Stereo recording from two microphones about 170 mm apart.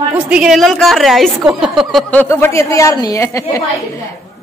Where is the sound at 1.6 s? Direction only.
5° right (ahead or behind); by 3.7 s 20° left (ahead or behind).